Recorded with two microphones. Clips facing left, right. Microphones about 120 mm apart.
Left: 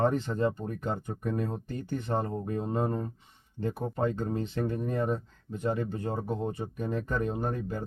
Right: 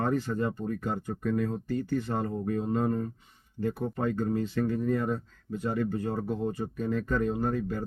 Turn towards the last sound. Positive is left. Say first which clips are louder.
# right 3 dB
turn(degrees=20)  # may be behind; listen again after turning